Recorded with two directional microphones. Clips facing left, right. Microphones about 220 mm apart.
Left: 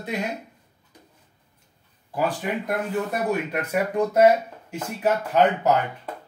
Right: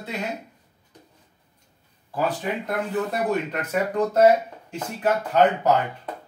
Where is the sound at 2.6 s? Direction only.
10° left (ahead or behind).